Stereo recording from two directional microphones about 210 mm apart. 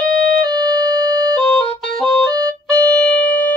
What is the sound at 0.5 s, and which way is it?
Music, 20° right (ahead or behind).